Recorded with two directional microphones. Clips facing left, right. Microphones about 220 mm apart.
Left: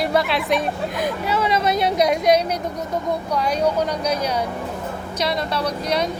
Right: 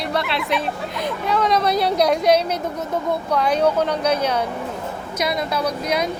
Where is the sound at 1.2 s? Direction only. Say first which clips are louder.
Right 3 dB; 5° left (ahead or behind).